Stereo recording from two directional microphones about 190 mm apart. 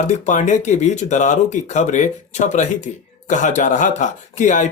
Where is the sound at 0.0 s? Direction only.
40° left (ahead or behind).